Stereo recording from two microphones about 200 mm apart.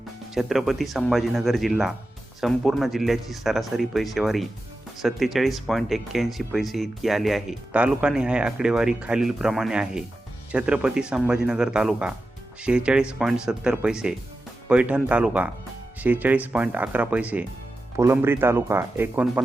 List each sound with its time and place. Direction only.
0.3 s speech: centre (ahead or behind)